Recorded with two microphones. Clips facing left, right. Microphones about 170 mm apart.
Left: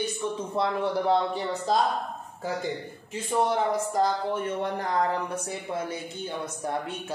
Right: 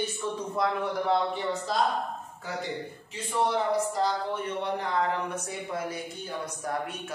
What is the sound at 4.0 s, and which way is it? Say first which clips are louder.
Speech: left 3 dB; 45° left (ahead or behind).